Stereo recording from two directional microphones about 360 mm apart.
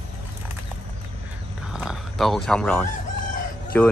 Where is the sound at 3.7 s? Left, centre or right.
Centre.